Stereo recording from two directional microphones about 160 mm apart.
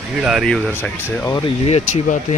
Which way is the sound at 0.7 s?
15° left (ahead or behind).